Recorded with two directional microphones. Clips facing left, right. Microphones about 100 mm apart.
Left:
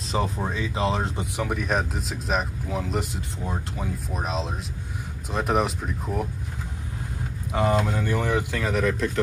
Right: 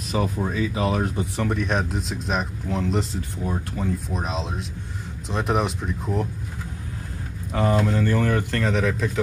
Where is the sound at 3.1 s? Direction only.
20° left (ahead or behind).